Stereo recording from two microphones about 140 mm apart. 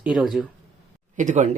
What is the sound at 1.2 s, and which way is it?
Speech, 60° right (ahead or behind).